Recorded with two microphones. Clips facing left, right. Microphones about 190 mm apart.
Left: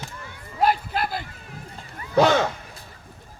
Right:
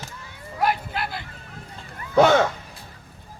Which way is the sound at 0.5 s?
35° left (ahead or behind).